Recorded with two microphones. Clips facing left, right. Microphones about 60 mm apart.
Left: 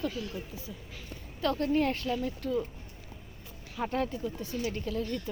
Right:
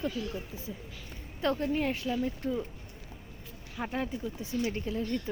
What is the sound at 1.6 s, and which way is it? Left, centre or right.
Speech, centre.